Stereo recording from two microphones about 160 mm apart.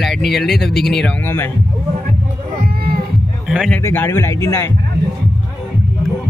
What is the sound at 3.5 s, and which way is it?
Speech, 5° right (ahead or behind).